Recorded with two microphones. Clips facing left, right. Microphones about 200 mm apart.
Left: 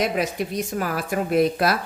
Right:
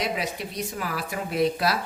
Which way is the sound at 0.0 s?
50° left (ahead or behind).